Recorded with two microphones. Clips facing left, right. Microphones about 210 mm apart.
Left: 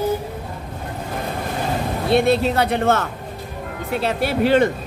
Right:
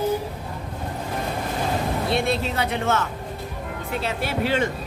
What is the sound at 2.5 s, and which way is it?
Speech, 55° left (ahead or behind).